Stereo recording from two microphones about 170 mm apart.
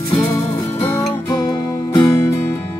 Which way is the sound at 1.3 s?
25° left (ahead or behind).